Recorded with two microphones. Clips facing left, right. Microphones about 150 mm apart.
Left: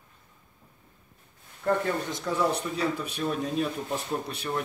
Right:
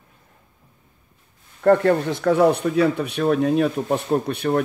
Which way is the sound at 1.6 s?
70° right (ahead or behind).